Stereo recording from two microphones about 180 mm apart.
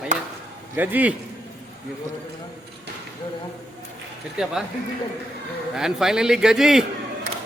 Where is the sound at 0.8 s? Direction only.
10° right (ahead or behind).